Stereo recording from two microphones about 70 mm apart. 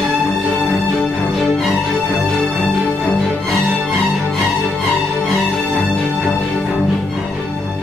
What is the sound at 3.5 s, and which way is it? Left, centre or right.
Music, centre.